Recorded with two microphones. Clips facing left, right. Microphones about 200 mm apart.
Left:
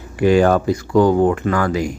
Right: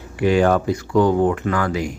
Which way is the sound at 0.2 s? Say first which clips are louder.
Left 3 dB; 40° left (ahead or behind).